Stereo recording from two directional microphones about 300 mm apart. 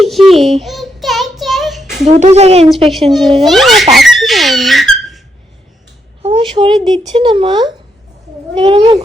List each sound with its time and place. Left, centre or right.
0.0 s child singing: centre
2.0 s speech: right
3.1 s a child's voice: centre
3.9 s squeak: centre
6.2 s speech: centre